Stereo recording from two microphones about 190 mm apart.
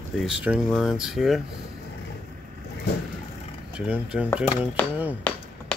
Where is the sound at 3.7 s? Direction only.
5° right (ahead or behind).